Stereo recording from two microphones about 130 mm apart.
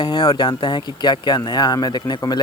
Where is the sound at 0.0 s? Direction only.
40° left (ahead or behind).